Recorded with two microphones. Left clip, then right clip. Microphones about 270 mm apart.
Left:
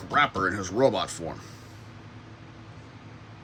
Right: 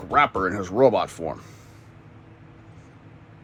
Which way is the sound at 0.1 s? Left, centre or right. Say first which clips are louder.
Right 3 dB; centre.